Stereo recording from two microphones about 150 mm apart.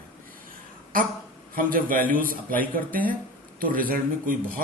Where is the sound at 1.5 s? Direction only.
70° right (ahead or behind).